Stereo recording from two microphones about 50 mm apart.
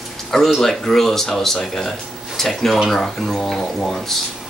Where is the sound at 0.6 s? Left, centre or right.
Centre.